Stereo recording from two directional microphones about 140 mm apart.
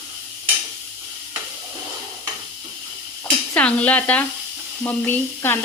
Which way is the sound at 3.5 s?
10° left (ahead or behind).